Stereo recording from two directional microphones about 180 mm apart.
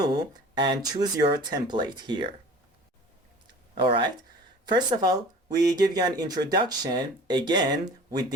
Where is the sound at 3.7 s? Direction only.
30° right (ahead or behind).